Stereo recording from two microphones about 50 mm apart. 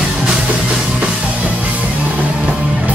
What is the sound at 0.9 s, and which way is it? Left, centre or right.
Music, right.